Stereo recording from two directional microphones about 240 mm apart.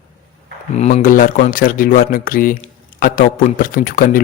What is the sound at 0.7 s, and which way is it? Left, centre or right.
A man's voice, left.